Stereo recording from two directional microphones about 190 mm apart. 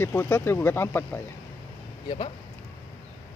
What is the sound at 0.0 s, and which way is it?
Speech, 15° left (ahead or behind).